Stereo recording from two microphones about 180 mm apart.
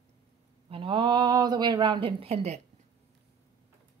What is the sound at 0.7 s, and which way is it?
Speech, 30° right (ahead or behind).